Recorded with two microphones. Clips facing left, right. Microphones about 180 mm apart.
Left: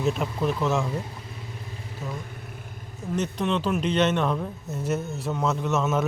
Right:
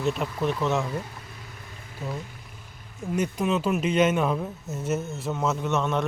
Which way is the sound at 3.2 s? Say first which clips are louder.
Right 1 dB; 10° right (ahead or behind).